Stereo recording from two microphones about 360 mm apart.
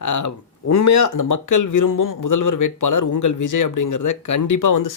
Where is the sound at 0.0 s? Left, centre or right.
Left.